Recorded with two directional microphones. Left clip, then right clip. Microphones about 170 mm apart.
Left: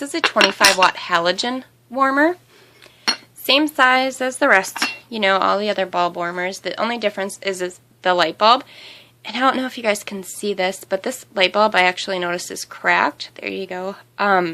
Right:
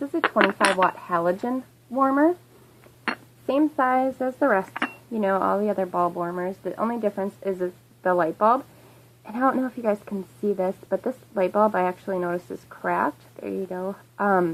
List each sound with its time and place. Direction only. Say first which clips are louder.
0.2 s a woman's voice: left 6 dB; 10° left (ahead or behind)
4.7 s chink: left 6 dB; 10° left (ahead or behind)
5.2 s a woman's voice: left 6 dB; 20° left (ahead or behind)